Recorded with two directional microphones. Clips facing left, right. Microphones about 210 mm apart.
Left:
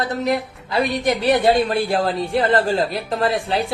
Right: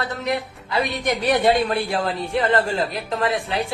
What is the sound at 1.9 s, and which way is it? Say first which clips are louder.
A woman's voice: left 3 dB; 30° left (ahead or behind).